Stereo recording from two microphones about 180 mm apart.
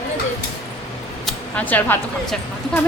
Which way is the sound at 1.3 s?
10° left (ahead or behind).